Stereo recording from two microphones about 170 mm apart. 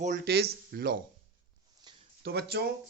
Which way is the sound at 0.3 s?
75° right (ahead or behind).